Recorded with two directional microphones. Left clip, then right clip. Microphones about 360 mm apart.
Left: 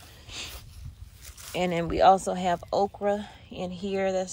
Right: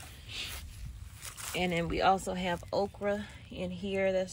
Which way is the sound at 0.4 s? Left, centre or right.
Centre.